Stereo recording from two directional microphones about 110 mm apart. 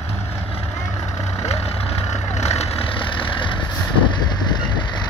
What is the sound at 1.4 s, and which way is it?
Vehicle, 70° left (ahead or behind).